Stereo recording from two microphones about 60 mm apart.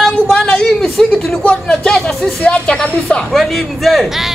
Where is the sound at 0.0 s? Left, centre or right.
Centre.